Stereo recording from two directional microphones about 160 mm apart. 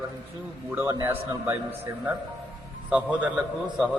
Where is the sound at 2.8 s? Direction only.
10° right (ahead or behind).